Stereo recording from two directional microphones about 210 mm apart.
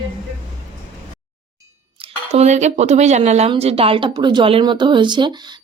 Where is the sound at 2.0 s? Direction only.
30° right (ahead or behind).